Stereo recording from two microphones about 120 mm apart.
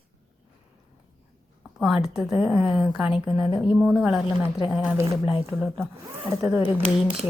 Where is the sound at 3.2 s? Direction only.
40° left (ahead or behind).